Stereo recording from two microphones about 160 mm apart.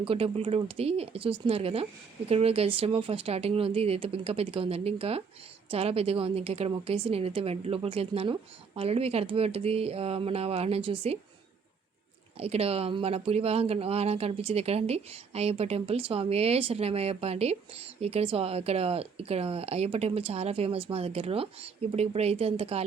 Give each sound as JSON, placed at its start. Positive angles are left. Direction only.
{"t": 0.0, "sound": "speech", "side_deg": -35}
{"t": 12.4, "sound": "speech", "side_deg": -40}